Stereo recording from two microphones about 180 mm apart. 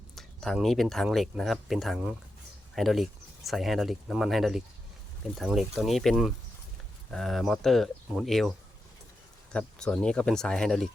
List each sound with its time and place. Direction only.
0.2 s speech: centre (ahead or behind)